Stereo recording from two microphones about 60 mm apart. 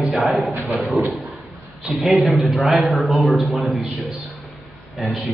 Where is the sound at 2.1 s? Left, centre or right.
Centre.